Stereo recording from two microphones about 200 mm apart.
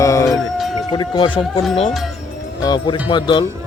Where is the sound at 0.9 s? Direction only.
25° left (ahead or behind).